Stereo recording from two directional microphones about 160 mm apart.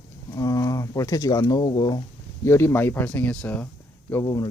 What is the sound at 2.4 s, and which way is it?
Speech, 15° left (ahead or behind).